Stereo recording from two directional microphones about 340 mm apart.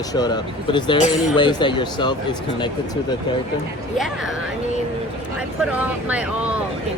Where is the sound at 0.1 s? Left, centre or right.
Centre.